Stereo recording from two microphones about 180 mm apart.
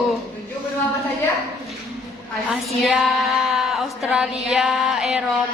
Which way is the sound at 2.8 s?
Centre (ahead or behind).